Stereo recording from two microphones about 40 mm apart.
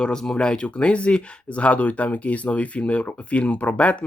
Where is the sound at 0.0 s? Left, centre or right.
Centre.